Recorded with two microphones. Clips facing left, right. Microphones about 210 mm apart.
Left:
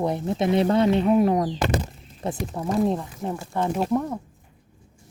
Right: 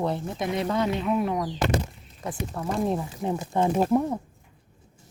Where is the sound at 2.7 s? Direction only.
Centre (ahead or behind).